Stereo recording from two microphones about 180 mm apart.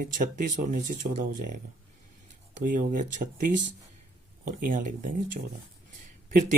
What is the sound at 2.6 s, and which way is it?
Speech, 50° right (ahead or behind).